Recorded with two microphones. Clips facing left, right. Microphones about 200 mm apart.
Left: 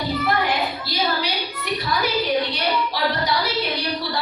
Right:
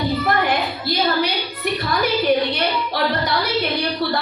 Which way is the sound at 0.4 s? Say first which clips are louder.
Right 3 dB; 55° right (ahead or behind).